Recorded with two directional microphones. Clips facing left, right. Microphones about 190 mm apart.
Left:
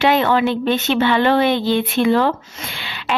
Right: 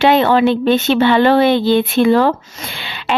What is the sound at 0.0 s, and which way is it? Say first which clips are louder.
Speech: right 4 dB; 30° right (ahead or behind).